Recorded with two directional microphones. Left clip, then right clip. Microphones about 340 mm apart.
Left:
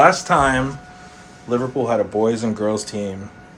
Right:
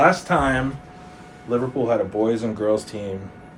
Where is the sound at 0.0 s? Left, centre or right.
Left.